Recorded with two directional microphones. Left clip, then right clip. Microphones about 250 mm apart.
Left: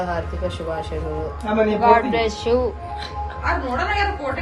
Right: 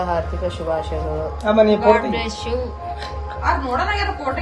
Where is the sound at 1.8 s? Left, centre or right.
Centre.